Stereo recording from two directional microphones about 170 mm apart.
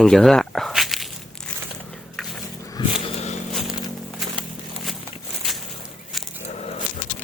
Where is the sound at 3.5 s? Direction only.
Centre (ahead or behind).